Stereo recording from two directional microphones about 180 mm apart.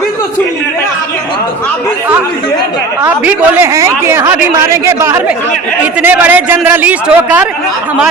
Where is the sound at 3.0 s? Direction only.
10° right (ahead or behind).